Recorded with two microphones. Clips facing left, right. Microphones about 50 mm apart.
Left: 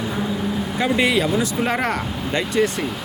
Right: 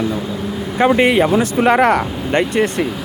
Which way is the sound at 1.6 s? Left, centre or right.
Right.